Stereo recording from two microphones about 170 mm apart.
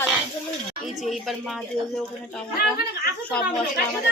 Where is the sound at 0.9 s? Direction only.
Centre (ahead or behind).